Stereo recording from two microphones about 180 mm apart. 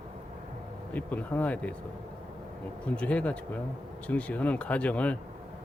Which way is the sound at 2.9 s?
5° left (ahead or behind).